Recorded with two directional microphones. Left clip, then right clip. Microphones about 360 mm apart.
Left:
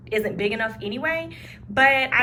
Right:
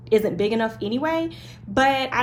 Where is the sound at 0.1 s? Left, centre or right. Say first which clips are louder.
Right 4 dB; centre.